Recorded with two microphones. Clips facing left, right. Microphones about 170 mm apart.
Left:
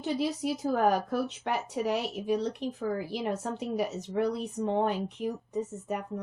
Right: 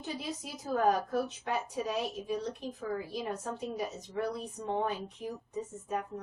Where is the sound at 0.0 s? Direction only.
75° left (ahead or behind).